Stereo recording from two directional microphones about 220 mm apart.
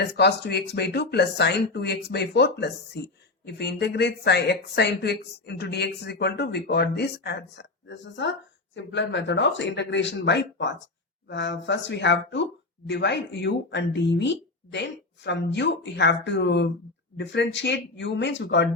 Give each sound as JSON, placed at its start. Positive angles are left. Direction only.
{"t": 0.0, "sound": "speech", "side_deg": 50}